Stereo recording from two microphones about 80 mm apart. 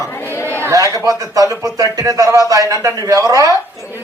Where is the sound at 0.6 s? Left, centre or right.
Right.